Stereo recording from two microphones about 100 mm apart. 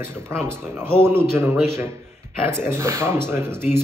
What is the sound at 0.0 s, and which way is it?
Speech, 25° right (ahead or behind).